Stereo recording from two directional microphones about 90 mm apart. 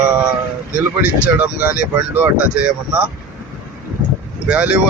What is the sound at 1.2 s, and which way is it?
Speech, 15° right (ahead or behind).